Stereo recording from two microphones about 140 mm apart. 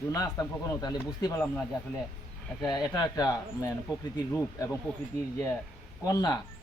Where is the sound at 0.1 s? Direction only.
25° left (ahead or behind).